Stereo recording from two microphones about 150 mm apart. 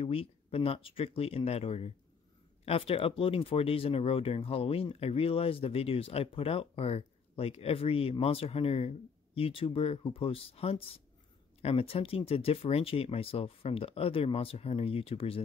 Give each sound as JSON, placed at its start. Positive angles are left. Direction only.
{"t": 0.0, "sound": "speech", "side_deg": 40}